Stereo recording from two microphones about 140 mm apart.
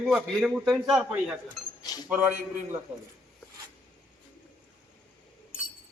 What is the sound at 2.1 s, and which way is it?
Speech, 15° right (ahead or behind).